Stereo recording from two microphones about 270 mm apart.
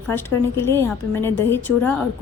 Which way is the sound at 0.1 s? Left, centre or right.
Centre.